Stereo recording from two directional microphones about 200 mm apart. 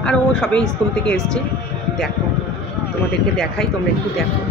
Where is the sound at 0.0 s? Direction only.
5° left (ahead or behind).